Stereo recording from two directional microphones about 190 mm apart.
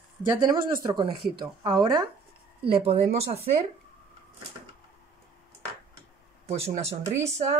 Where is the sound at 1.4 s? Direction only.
20° right (ahead or behind).